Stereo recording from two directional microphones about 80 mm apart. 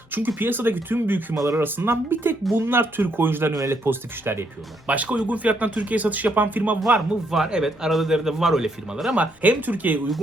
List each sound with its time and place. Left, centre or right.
0.1 s speech: right
3.5 s speech: right
3.8 s speech: right
4.9 s speech: centre
7.3 s a man's voice: centre
9.1 s speech: centre